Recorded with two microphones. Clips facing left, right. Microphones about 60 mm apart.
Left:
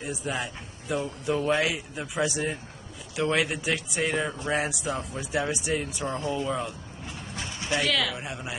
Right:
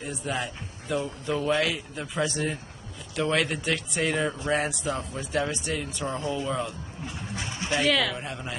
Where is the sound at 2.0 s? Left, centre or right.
Centre.